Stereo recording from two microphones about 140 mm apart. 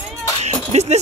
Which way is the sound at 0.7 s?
50° right (ahead or behind).